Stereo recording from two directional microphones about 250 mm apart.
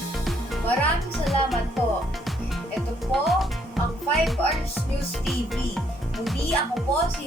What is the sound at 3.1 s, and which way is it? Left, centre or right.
Speech, centre.